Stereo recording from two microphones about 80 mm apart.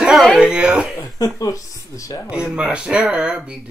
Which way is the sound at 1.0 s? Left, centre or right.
Left.